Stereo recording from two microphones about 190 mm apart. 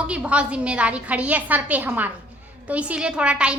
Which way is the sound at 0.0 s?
5° right (ahead or behind).